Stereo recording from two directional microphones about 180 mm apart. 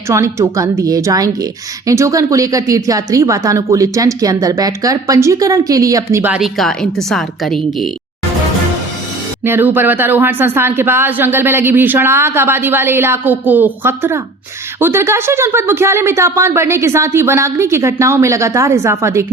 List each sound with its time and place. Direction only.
0.1 s speech: 15° right (ahead or behind); by 7.9 s centre (ahead or behind)
9.4 s speech: 10° right (ahead or behind)